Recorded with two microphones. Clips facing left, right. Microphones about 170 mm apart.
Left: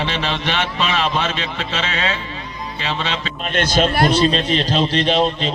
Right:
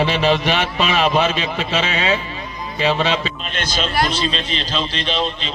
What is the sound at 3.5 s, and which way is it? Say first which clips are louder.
A man's voice: left 9 dB; 55° left (ahead or behind).